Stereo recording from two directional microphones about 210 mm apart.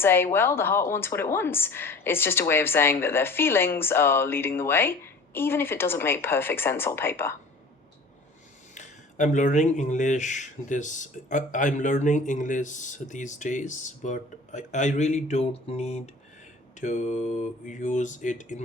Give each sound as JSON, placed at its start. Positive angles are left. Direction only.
{"t": 0.0, "sound": "speech", "side_deg": 10}
{"t": 8.7, "sound": "speech", "side_deg": 35}